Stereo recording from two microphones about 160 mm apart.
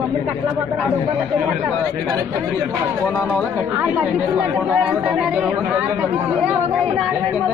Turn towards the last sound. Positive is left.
turn(degrees=-5)  # may be behind; listen again after turning